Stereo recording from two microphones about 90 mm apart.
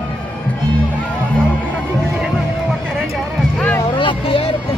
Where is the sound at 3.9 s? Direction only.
70° left (ahead or behind).